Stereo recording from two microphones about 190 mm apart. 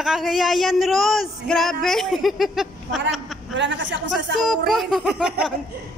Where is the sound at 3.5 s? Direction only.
75° right (ahead or behind).